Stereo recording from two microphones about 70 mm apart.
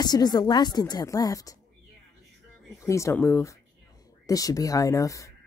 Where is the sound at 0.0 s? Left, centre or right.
Left.